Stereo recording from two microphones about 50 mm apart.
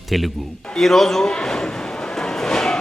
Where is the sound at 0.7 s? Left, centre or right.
Centre.